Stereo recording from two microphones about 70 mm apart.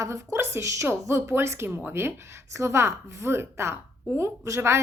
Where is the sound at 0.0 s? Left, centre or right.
Right.